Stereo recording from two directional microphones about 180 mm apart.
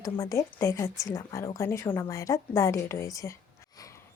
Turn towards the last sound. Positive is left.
turn(degrees=15)  # may be behind; listen again after turning